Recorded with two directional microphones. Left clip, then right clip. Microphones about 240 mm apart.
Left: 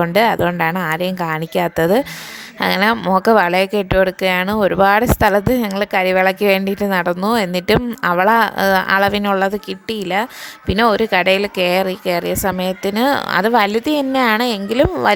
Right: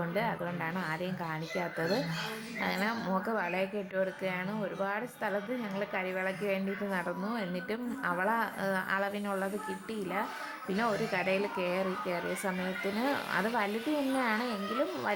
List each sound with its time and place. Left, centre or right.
0.0 s speech: left